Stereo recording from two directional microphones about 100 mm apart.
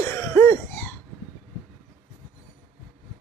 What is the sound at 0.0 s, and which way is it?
Cough, 25° left (ahead or behind).